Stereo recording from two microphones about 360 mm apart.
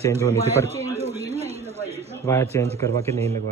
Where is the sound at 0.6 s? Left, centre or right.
Centre.